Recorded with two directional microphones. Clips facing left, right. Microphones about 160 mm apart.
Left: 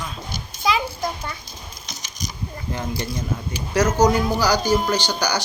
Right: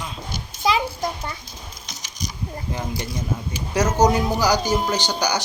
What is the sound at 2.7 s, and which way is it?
A man's voice, 15° right (ahead or behind).